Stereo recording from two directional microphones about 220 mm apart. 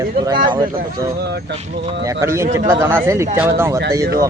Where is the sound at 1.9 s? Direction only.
15° right (ahead or behind).